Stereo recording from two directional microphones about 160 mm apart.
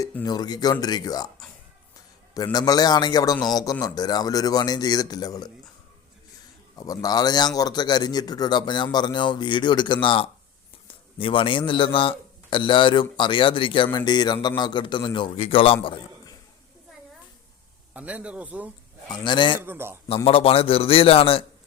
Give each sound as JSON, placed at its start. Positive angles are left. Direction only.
{"t": 0.3, "sound": "a man's voice", "side_deg": 25}
{"t": 2.3, "sound": "a man's voice", "side_deg": 25}
{"t": 6.7, "sound": "a man's voice", "side_deg": 25}
{"t": 17.9, "sound": "speech", "side_deg": -10}
{"t": 19.1, "sound": "a man's voice", "side_deg": 30}
{"t": 19.6, "sound": "speech", "side_deg": -15}
{"t": 20.2, "sound": "a man's voice", "side_deg": 35}